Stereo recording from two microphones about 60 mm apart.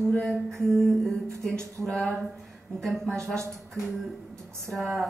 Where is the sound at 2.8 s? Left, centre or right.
Centre.